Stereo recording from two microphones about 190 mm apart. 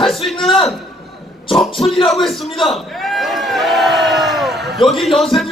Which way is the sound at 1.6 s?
Centre (ahead or behind).